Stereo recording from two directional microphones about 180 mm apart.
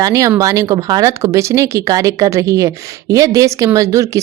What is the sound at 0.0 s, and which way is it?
A woman's voice, 20° right (ahead or behind).